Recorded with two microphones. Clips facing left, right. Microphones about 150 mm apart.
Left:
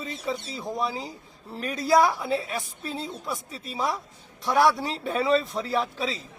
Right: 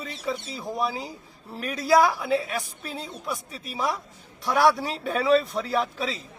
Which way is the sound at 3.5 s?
25° left (ahead or behind).